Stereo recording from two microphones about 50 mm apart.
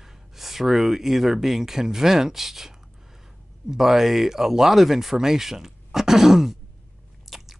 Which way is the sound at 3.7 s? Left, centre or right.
Centre.